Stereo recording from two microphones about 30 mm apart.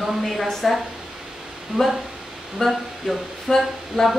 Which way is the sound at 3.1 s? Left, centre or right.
Centre.